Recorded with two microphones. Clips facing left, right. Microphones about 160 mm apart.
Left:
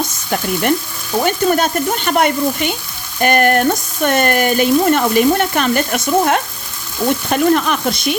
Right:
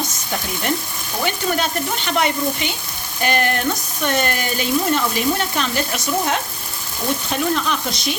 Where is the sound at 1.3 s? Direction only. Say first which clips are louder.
Left 6 dB; 45° left (ahead or behind).